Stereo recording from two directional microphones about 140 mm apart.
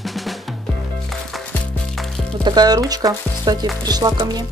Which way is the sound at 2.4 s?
30° right (ahead or behind).